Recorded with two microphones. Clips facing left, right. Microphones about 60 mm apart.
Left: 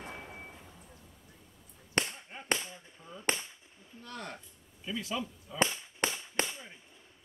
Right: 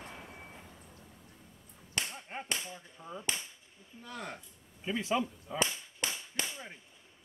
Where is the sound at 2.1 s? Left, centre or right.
Right.